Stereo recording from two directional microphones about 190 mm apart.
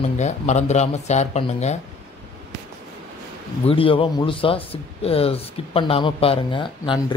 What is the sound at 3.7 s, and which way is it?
Speech, 30° left (ahead or behind).